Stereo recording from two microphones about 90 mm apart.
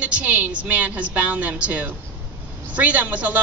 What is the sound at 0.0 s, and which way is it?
A man's voice, 15° right (ahead or behind).